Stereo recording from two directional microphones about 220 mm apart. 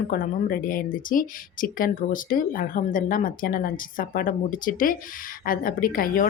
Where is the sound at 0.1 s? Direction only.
40° left (ahead or behind).